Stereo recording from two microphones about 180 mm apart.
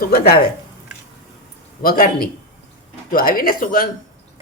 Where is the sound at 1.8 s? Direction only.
55° left (ahead or behind).